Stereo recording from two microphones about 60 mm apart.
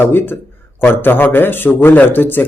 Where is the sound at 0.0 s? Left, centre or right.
Left.